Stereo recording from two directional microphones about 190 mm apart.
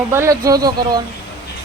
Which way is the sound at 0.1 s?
15° right (ahead or behind).